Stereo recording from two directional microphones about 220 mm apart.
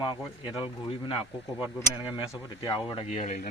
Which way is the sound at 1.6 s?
5° right (ahead or behind).